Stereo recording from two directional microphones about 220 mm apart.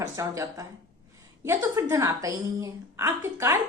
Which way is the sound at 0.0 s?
15° right (ahead or behind).